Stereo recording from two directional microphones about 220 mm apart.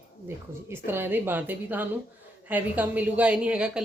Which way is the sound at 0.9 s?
10° right (ahead or behind).